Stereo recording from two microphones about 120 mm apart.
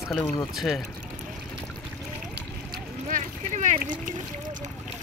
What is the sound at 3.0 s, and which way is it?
Boat, 90° right.